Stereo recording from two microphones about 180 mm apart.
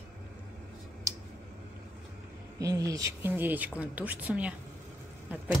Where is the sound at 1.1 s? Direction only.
20° right (ahead or behind).